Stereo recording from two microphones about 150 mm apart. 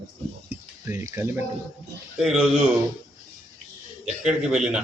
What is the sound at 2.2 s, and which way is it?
Speech, centre (ahead or behind).